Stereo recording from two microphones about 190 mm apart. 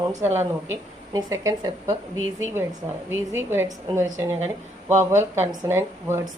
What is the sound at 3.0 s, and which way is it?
A woman's voice, 10° right (ahead or behind).